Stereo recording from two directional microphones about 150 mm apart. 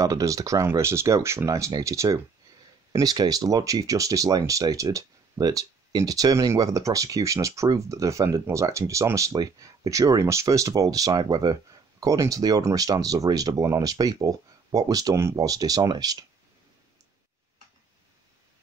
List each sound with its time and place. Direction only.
0.0 s speech: 20° right (ahead or behind)